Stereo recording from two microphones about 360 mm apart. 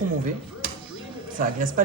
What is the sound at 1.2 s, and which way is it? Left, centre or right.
Speech, right.